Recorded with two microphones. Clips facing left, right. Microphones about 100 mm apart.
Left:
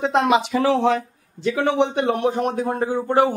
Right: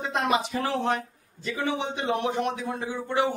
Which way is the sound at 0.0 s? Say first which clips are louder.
Left 8 dB; 85° left.